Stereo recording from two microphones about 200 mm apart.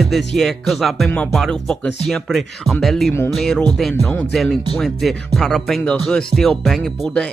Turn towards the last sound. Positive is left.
turn(degrees=5)  # may be behind; listen again after turning